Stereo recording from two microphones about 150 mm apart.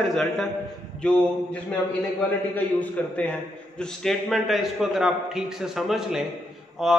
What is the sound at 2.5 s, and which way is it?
A man's voice, 10° left (ahead or behind).